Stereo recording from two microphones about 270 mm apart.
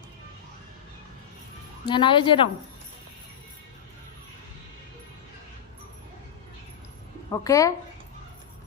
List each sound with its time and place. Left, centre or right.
1.9 s speech: centre
7.3 s speech: centre